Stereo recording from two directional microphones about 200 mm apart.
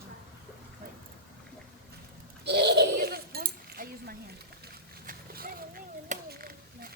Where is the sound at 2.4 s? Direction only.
55° right (ahead or behind).